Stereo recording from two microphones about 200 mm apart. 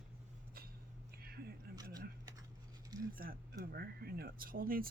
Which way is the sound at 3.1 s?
45° right (ahead or behind).